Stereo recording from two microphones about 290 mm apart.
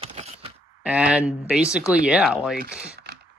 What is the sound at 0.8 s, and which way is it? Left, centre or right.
Speech, centre.